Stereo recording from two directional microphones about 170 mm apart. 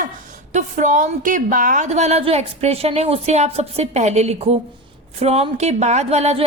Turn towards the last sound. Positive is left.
turn(degrees=-40)  # may be behind; listen again after turning